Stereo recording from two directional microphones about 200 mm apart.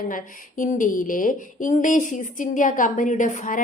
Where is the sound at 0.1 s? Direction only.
40° left (ahead or behind).